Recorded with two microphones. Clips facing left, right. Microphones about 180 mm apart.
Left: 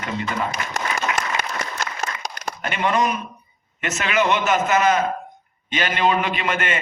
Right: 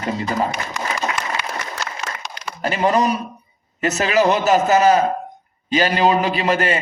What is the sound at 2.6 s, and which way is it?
A man's voice, 35° right (ahead or behind).